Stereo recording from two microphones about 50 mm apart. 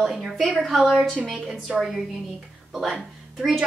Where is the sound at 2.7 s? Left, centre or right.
Centre.